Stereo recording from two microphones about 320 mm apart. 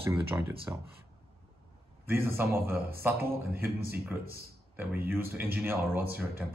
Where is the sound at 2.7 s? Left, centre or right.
Right.